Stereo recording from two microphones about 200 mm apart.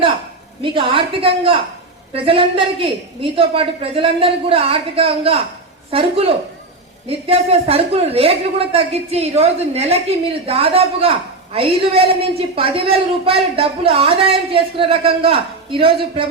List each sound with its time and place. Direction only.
0.6 s speech: 25° right (ahead or behind)